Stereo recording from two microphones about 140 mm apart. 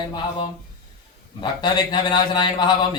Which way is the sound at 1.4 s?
30° left (ahead or behind).